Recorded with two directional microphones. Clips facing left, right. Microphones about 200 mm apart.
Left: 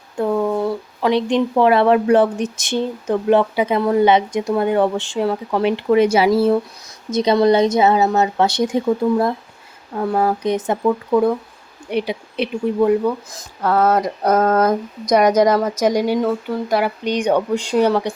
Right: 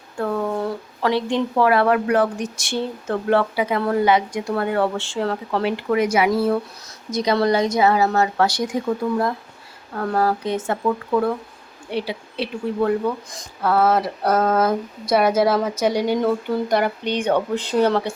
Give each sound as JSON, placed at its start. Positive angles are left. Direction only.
{"t": 0.2, "sound": "speech", "side_deg": 10}
{"t": 9.9, "sound": "speech", "side_deg": 15}
{"t": 13.3, "sound": "speech", "side_deg": -5}
{"t": 15.8, "sound": "speech", "side_deg": 10}